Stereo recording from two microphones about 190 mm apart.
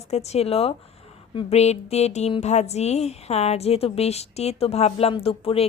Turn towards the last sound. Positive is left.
turn(degrees=30)  # may be behind; listen again after turning